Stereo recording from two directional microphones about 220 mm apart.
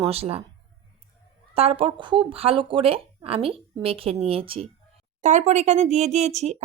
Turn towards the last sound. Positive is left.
turn(degrees=-30)  # may be behind; listen again after turning